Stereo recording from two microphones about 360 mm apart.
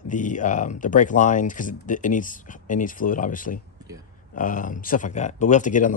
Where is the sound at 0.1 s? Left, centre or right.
Left.